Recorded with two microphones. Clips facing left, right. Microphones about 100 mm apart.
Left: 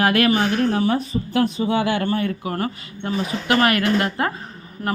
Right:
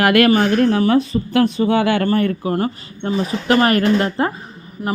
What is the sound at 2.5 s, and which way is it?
A woman's voice, 30° right (ahead or behind).